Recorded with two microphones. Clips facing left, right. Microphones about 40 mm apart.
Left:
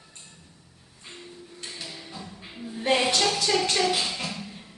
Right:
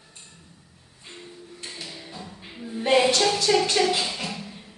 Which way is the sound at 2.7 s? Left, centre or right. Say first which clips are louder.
Right 3 dB; centre.